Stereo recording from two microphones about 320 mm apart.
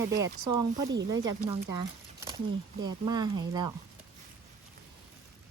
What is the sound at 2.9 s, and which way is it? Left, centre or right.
Speech, centre.